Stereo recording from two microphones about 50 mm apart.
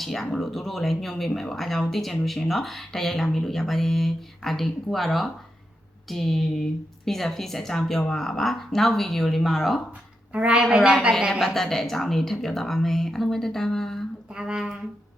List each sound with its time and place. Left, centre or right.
0.0 s speech: centre
10.3 s a woman's voice: right
10.6 s speech: centre
11.3 s speech: centre
14.3 s speech: centre